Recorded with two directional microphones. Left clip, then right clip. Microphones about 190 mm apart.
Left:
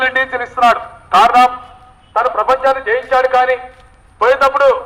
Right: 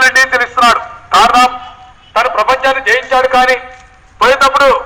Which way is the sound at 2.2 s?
20° right (ahead or behind).